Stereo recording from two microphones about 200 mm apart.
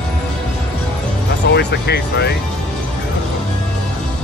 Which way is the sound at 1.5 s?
55° left (ahead or behind).